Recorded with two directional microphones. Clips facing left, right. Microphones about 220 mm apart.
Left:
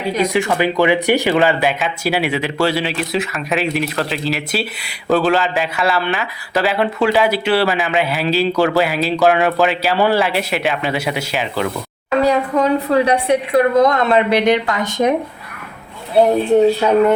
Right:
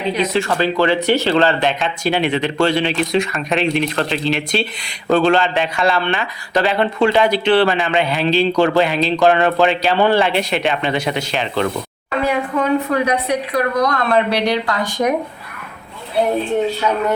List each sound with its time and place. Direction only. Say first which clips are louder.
0.2 s speech: left 3 dB; 15° left (ahead or behind)
12.2 s a woman's voice: left 3 dB; 35° left (ahead or behind)